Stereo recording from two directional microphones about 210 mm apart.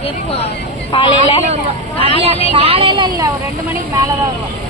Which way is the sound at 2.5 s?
25° right (ahead or behind).